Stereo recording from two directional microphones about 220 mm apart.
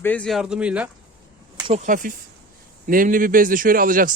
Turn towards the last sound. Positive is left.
turn(degrees=-40)  # may be behind; listen again after turning